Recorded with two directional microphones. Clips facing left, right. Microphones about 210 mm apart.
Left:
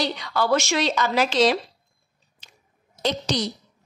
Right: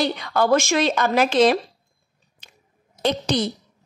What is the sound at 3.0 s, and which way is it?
Speech, 55° right (ahead or behind).